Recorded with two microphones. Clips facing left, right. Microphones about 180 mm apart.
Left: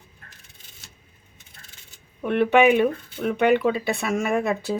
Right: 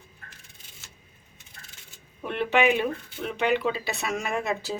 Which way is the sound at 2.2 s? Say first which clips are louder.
Left 6 dB; 55° left (ahead or behind).